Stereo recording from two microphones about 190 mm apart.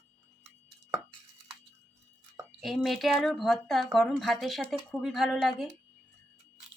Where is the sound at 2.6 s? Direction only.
Centre (ahead or behind).